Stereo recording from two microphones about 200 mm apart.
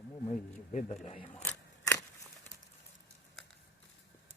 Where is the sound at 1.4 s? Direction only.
10° left (ahead or behind).